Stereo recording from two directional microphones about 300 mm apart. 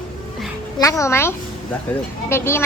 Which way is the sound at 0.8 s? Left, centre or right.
Centre.